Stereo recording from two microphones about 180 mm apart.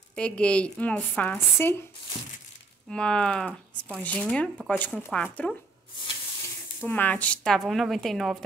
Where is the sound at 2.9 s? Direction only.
5° left (ahead or behind).